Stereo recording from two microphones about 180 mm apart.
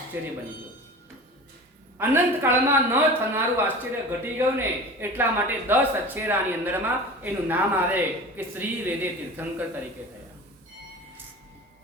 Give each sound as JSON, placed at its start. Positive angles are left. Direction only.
{"t": 0.1, "sound": "a man's voice", "side_deg": -10}
{"t": 2.0, "sound": "a man's voice", "side_deg": -10}